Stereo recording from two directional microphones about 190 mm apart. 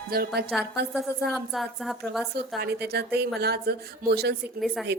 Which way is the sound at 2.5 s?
55° right (ahead or behind).